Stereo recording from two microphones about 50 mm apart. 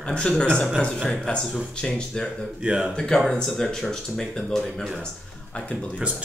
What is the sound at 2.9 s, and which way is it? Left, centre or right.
Speech, centre.